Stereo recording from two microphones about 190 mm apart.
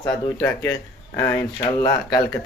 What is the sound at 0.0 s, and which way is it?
Speech, 15° left (ahead or behind).